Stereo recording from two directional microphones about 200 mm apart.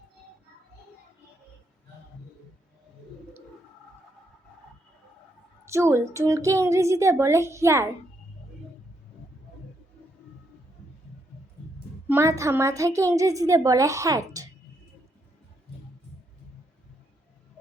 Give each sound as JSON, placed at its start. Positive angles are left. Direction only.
{"t": 5.6, "sound": "a woman's voice", "side_deg": -15}
{"t": 12.0, "sound": "a woman's voice", "side_deg": -10}